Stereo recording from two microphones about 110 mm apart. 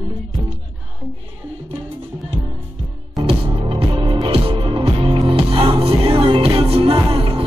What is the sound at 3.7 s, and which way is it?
Music, 50° right (ahead or behind).